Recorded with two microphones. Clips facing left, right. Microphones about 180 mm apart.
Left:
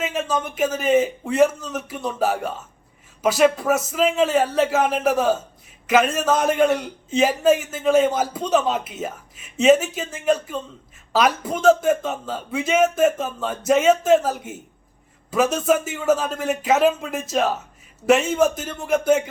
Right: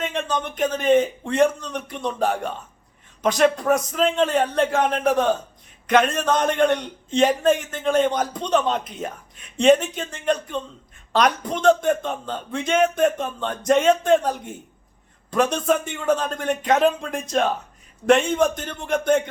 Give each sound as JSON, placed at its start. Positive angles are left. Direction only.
{"t": 0.0, "sound": "a man's voice", "side_deg": 5}